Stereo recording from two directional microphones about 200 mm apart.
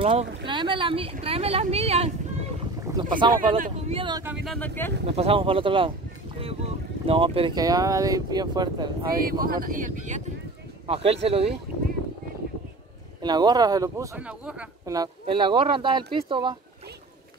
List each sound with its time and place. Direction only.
0.0 s speech: 25° right (ahead or behind)
3.5 s speech: 40° right (ahead or behind)
4.5 s speech: 10° left (ahead or behind)
5.1 s speech: 30° right (ahead or behind)
9.2 s speech: 45° right (ahead or behind); by 11.5 s 30° right (ahead or behind)
13.2 s speech: 20° right (ahead or behind)
14.2 s speech: 5° right (ahead or behind)
14.9 s speech: 20° right (ahead or behind)